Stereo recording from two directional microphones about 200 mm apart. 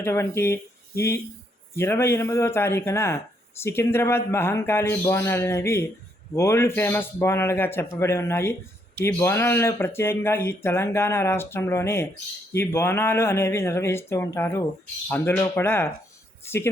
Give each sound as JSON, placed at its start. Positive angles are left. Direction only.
{"t": 0.0, "sound": "speech", "side_deg": 15}